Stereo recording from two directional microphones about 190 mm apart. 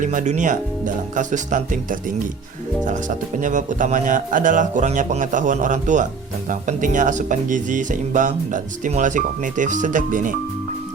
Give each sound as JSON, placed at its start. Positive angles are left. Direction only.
{"t": 0.0, "sound": "speech", "side_deg": -45}